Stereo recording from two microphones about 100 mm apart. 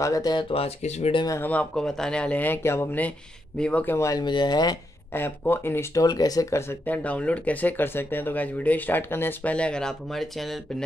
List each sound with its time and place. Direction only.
0.0 s speech: 35° left (ahead or behind)
0.5 s speech: 80° left
1.4 s speech: 15° left (ahead or behind)
4.2 s speech: 45° left (ahead or behind)
5.1 s speech: 20° left (ahead or behind)
6.0 s speech: 40° left (ahead or behind)
6.9 s speech: 15° left (ahead or behind)